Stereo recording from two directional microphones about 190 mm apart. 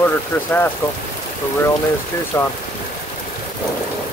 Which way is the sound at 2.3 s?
15° left (ahead or behind).